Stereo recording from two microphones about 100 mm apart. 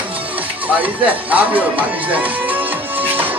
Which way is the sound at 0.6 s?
15° right (ahead or behind).